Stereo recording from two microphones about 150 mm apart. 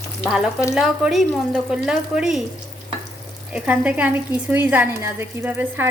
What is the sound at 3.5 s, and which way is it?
A woman's voice, 10° right (ahead or behind).